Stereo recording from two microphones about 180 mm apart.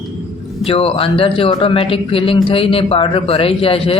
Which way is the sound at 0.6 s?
30° left (ahead or behind).